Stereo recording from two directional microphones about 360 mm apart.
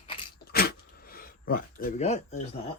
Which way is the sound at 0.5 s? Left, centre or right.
Left.